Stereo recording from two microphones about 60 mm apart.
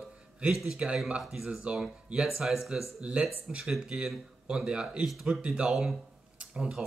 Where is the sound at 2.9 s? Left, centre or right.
Centre.